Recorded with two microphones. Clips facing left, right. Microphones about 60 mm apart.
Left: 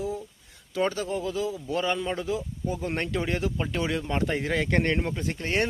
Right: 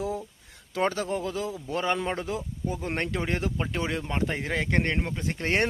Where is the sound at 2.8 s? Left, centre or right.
Right.